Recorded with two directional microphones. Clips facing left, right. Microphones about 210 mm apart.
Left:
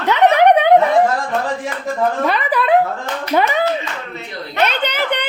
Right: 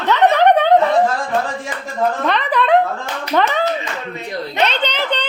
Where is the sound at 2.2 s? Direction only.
5° left (ahead or behind).